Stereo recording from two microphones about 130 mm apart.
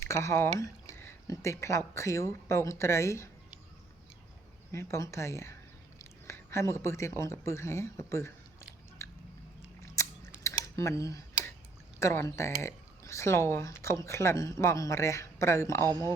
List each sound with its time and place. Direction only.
0.0 s speech: 20° left (ahead or behind)
4.7 s speech: 20° left (ahead or behind)
6.0 s whispering: 20° left (ahead or behind)
7.2 s speech: 20° left (ahead or behind)
9.0 s chewing: 20° left (ahead or behind)
9.8 s biting: 20° left (ahead or behind)
10.4 s a sound: 25° left (ahead or behind)
11.9 s speech: 20° left (ahead or behind)
15.9 s speech: 25° right (ahead or behind)